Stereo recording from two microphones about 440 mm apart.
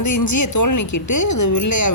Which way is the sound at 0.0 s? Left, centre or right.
Left.